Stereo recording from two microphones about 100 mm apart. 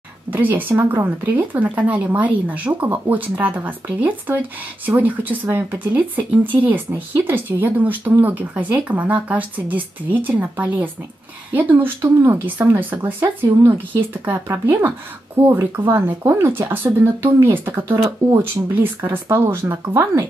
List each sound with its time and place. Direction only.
0.3 s speech: 20° right (ahead or behind)